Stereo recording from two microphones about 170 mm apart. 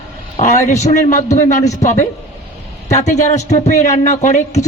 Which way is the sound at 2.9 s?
45° left (ahead or behind).